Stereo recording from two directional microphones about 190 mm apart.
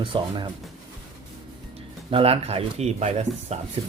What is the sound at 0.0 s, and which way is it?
Speech, 25° right (ahead or behind).